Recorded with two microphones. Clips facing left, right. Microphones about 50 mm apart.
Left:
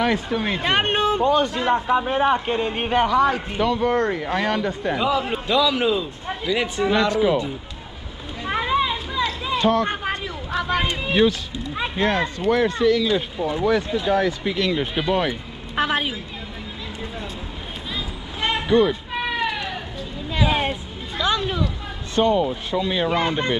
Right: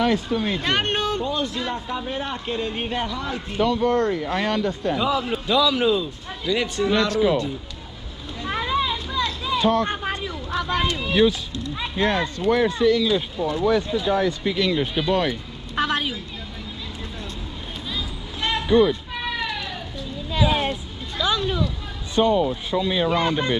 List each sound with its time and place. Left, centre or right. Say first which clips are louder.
0.0 s speech: even; centre
1.2 s a man's voice: left 7 dB; left
3.3 s a man's voice: even; left
3.6 s a man's voice: even; centre
5.5 s speech: even; centre
8.4 s a sound: left 2 dB; centre
9.6 s speech: left 1 dB; centre
9.8 s a sound: left 1 dB; left
12.0 s speech: even; centre
13.0 s a man's voice: even; left
17.9 s a sound: left 2 dB; left
18.7 s music: right 1 dB; centre
20.3 s a sound: even; centre
22.2 s a man's voice: even; left